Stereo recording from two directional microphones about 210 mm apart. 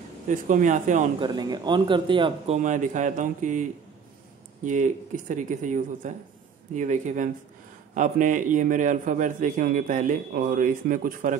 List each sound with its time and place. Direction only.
0.3 s a man's voice: 35° right (ahead or behind)
1.2 s speech: 20° right (ahead or behind); by 3.6 s 35° right (ahead or behind)
4.6 s a man's voice: 35° right (ahead or behind)